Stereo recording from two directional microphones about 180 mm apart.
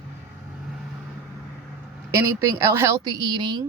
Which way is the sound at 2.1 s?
20° right (ahead or behind).